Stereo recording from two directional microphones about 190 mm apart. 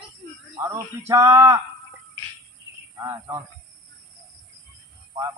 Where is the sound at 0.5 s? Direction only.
15° right (ahead or behind).